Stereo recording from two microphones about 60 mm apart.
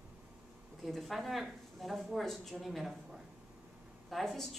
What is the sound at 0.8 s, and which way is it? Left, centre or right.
Speech, centre.